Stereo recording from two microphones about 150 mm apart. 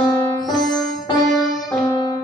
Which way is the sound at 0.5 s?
25° left (ahead or behind).